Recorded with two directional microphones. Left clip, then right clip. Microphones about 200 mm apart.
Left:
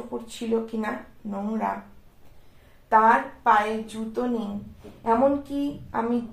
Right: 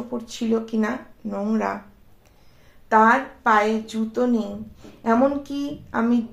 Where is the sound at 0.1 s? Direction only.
40° right (ahead or behind).